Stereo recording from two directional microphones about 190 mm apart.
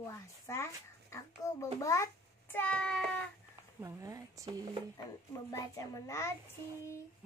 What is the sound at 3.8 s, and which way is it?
Speech, 15° right (ahead or behind).